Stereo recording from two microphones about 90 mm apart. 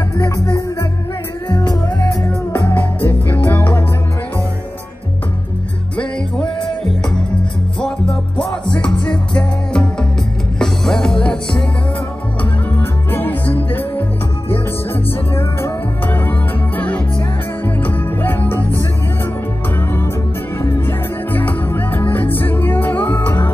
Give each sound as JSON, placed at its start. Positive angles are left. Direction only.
{"t": 2.5, "sound": "music", "side_deg": 20}
{"t": 7.8, "sound": "music", "side_deg": 5}
{"t": 13.1, "sound": "music", "side_deg": 20}
{"t": 15.3, "sound": "music", "side_deg": 25}
{"t": 18.6, "sound": "music", "side_deg": -35}
{"t": 20.6, "sound": "music", "side_deg": 30}
{"t": 21.3, "sound": "music", "side_deg": 20}